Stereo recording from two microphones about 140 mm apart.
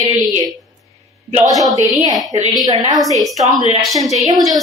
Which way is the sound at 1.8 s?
25° right (ahead or behind).